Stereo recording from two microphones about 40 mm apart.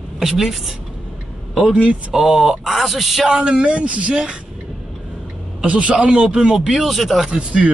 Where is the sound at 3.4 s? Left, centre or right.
Right.